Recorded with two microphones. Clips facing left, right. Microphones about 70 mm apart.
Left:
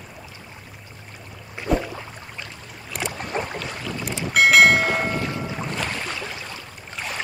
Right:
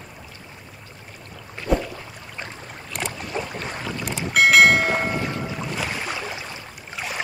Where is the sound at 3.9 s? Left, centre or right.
Centre.